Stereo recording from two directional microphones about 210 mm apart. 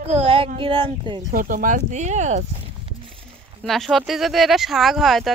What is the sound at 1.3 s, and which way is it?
Speech, 40° right (ahead or behind).